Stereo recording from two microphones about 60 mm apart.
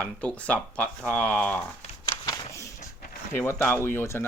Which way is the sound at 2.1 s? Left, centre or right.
Left.